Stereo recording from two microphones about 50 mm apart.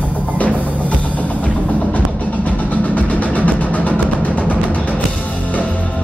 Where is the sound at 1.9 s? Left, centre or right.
Left.